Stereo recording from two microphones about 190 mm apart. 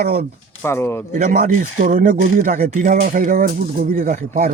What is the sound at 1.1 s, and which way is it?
Speech, 45° right (ahead or behind).